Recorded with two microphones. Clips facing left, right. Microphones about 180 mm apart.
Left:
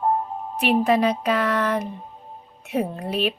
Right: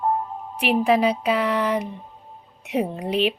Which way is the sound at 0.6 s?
10° right (ahead or behind).